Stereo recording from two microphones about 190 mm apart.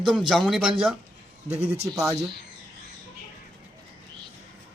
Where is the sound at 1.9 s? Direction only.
15° right (ahead or behind).